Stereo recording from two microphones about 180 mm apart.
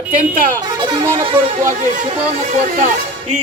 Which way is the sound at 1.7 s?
45° right (ahead or behind).